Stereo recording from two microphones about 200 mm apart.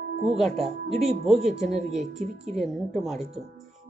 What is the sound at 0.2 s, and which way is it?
Music, centre (ahead or behind).